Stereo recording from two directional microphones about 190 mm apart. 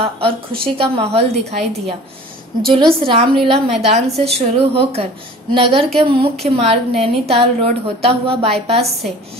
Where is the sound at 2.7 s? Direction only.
25° right (ahead or behind).